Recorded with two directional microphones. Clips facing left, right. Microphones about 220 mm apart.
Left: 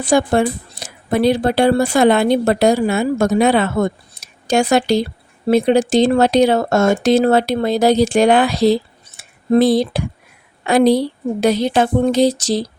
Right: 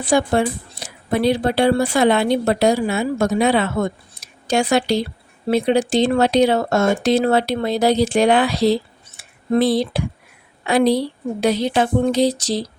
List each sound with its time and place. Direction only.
0.0 s a woman's voice: 45° left (ahead or behind)